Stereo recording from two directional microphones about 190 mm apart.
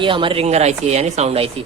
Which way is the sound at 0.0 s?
25° right (ahead or behind).